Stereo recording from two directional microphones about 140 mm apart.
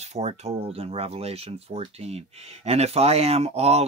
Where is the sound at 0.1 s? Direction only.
50° right (ahead or behind).